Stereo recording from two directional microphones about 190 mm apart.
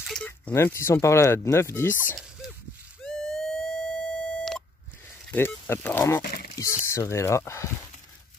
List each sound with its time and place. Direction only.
0.0 s speech: 5° left (ahead or behind)
3.0 s a sound: centre (ahead or behind)
5.3 s speech: 10° left (ahead or behind)
6.2 s speech: 50° left (ahead or behind)
6.5 s speech: 15° left (ahead or behind)